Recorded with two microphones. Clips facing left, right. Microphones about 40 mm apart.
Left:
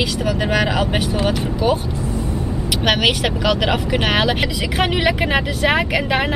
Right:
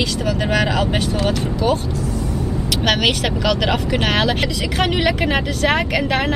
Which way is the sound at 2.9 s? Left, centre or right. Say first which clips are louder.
Left 1 dB; centre.